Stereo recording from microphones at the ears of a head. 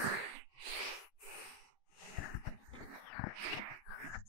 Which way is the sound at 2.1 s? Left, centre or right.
Left.